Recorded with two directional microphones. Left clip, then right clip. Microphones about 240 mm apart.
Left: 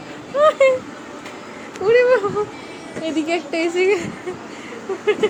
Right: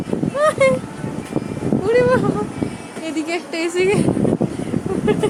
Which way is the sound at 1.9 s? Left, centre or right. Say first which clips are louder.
Left 2 dB; centre.